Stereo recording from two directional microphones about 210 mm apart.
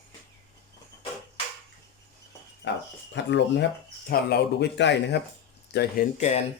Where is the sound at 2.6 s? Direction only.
60° left (ahead or behind).